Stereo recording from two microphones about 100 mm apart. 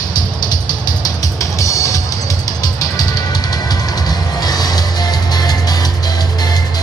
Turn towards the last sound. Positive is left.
turn(degrees=40)  # may be behind; listen again after turning